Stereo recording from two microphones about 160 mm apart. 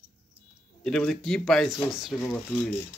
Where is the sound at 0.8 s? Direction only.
5° left (ahead or behind).